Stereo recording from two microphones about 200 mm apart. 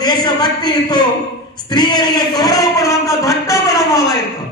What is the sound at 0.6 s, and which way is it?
Speech, 20° left (ahead or behind).